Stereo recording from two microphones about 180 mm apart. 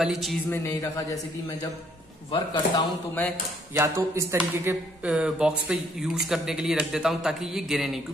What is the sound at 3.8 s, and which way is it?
Speech, 15° right (ahead or behind).